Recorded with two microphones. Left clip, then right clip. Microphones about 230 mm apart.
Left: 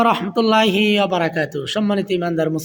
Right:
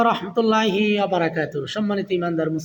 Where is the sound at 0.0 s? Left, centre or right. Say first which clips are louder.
Left 3 dB; left.